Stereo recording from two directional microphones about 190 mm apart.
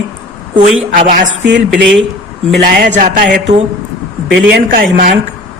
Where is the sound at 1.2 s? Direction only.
75° right (ahead or behind).